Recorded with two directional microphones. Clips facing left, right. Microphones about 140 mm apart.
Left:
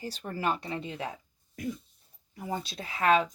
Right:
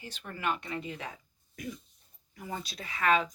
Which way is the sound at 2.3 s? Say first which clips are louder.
Left 4 dB; 30° left (ahead or behind).